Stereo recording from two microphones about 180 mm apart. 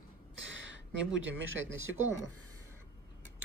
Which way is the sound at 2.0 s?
15° right (ahead or behind).